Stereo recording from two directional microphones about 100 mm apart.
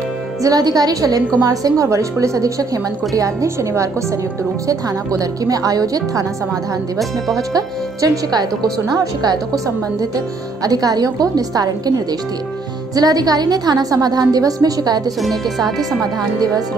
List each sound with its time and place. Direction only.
0.4 s a woman's voice: 40° right (ahead or behind)
7.0 s speech: centre (ahead or behind)
7.5 s a woman's voice: 35° right (ahead or behind)
10.6 s a woman's voice: 40° right (ahead or behind)
15.2 s speech: centre (ahead or behind)